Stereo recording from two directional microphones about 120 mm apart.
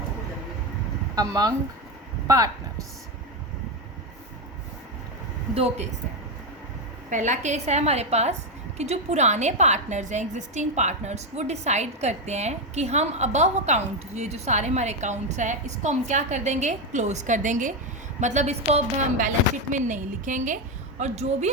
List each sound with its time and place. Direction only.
1.1 s speech: 30° right (ahead or behind)
5.5 s a woman's voice: 60° right (ahead or behind)
7.1 s a woman's voice: 90° right
18.2 s a woman's voice: 80° right
21.0 s a woman's voice: 65° right (ahead or behind)